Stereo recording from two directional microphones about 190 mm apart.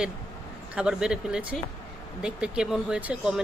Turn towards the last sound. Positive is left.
turn(degrees=-5)  # may be behind; listen again after turning